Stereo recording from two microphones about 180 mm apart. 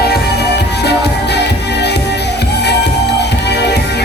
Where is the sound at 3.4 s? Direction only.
65° left (ahead or behind).